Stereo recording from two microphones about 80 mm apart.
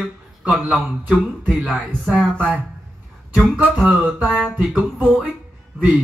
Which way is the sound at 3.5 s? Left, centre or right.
Centre.